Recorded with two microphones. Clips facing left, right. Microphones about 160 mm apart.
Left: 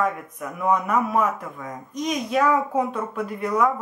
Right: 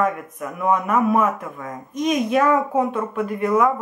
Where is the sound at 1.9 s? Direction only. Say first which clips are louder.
Right 5 dB; 55° right (ahead or behind).